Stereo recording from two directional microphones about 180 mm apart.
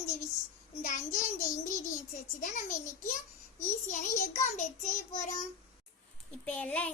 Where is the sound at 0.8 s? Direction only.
45° left (ahead or behind).